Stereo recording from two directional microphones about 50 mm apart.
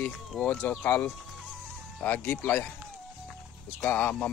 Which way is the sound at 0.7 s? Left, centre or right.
Left.